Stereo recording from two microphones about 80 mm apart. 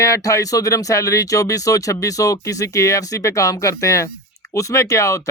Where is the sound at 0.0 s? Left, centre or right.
Left.